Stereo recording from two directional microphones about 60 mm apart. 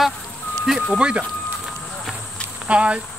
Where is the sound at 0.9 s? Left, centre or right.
Centre.